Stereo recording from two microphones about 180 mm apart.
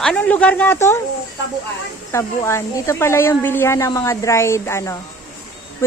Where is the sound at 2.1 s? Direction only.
15° left (ahead or behind).